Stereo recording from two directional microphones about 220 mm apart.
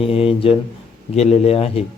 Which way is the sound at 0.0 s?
25° left (ahead or behind).